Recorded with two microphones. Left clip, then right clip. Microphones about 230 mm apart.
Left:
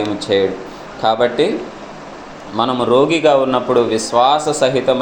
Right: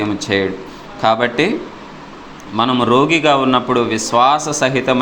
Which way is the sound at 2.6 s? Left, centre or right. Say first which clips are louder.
Even; right.